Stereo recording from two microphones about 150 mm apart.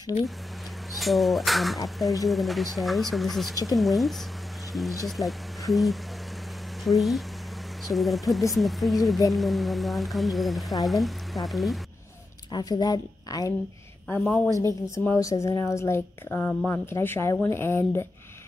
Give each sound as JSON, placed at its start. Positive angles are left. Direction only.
{"t": 0.9, "sound": "speech", "side_deg": 0}
{"t": 12.5, "sound": "a woman's voice", "side_deg": 25}
{"t": 14.0, "sound": "speech", "side_deg": 5}
{"t": 14.5, "sound": "speech", "side_deg": 20}